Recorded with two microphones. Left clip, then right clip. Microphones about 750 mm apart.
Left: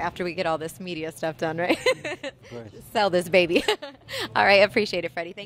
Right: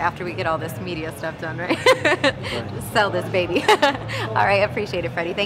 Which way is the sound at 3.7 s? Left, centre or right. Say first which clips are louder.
Right 11 dB; left.